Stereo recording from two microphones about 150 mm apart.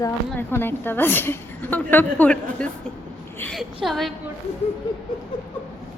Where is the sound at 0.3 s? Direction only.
15° left (ahead or behind).